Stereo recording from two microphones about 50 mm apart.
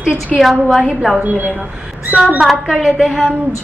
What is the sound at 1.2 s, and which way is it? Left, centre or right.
A woman's voice, right.